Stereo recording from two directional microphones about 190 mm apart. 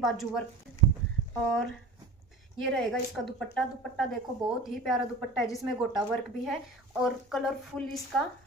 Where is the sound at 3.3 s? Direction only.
5° left (ahead or behind).